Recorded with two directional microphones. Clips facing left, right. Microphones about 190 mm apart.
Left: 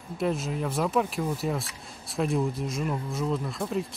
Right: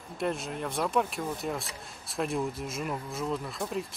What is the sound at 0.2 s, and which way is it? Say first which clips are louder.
Speech: left 4 dB; centre (ahead or behind).